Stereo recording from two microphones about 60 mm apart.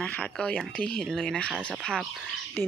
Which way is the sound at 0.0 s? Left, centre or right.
Left.